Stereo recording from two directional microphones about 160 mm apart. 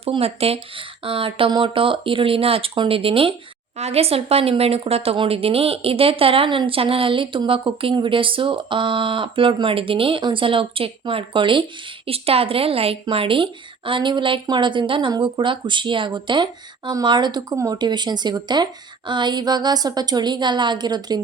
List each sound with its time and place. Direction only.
0.0 s a woman's voice: 40° right (ahead or behind)